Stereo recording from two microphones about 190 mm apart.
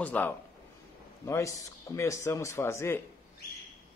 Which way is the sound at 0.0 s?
10° left (ahead or behind).